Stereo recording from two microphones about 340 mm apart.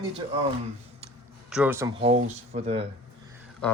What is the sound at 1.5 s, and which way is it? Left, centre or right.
Speech, centre.